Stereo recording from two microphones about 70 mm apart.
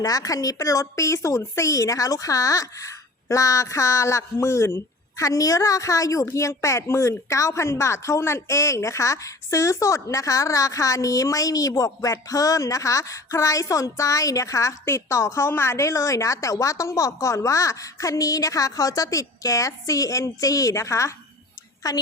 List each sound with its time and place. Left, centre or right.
0.0 s a woman's voice: left
21.8 s a woman's voice: left